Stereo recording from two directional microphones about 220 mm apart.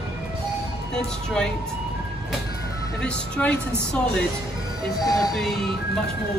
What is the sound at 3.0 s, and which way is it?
Speech, 5° left (ahead or behind).